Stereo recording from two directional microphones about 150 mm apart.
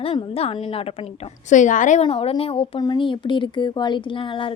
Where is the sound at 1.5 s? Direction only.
55° left (ahead or behind).